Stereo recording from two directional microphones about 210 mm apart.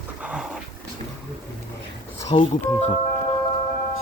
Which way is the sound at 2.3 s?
30° left (ahead or behind).